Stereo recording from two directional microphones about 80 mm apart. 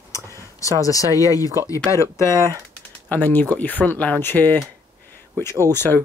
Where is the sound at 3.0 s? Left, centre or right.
Left.